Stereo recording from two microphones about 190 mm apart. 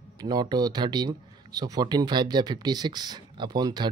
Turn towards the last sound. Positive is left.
turn(degrees=-20)  # may be behind; listen again after turning